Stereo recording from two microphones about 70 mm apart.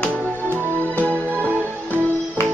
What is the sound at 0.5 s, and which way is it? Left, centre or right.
Music, left.